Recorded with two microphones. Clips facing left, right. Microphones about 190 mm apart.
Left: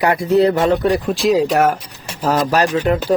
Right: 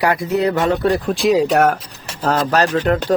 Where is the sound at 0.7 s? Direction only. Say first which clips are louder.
Left 1 dB; 10° left (ahead or behind).